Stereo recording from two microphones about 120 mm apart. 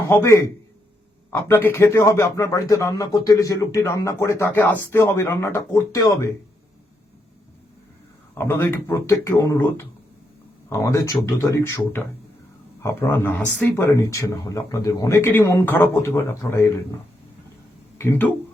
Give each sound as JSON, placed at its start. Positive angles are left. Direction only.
{"t": 0.1, "sound": "a man's voice", "side_deg": 20}
{"t": 8.4, "sound": "a man's voice", "side_deg": 20}
{"t": 13.8, "sound": "a man's voice", "side_deg": 25}
{"t": 17.9, "sound": "speech", "side_deg": 20}